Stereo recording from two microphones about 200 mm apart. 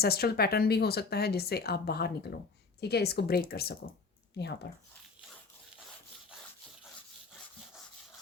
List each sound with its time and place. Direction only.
0.0 s speech: 50° left (ahead or behind)